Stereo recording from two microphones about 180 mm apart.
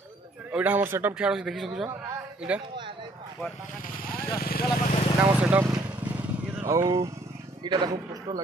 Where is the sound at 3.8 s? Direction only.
55° left (ahead or behind).